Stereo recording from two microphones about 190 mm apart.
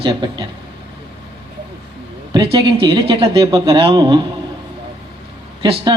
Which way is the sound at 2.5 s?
25° right (ahead or behind).